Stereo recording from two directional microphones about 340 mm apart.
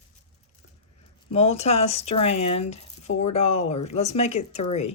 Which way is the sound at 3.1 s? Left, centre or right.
Left.